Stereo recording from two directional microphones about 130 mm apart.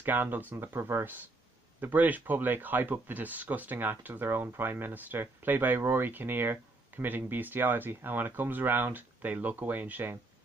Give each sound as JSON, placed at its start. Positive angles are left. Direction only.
{"t": 0.0, "sound": "speech", "side_deg": -15}